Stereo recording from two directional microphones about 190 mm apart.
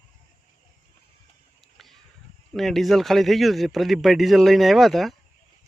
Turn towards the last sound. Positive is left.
turn(degrees=0)  # may be behind; listen again after turning